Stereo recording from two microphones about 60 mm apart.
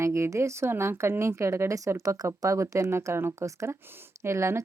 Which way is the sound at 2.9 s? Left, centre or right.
Right.